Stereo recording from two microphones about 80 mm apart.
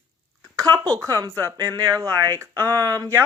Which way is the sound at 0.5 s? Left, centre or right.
Right.